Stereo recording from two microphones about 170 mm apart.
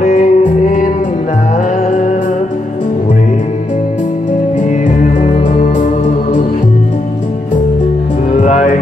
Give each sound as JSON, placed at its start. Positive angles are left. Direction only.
{"t": 0.0, "sound": "music", "side_deg": 45}
{"t": 1.9, "sound": "music", "side_deg": 45}
{"t": 4.6, "sound": "music", "side_deg": 50}
{"t": 8.4, "sound": "music", "side_deg": 45}